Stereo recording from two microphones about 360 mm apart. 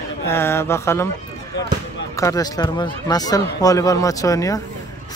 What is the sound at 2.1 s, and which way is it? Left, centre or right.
Speech, centre.